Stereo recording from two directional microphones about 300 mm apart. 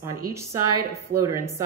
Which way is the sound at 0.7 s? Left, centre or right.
Right.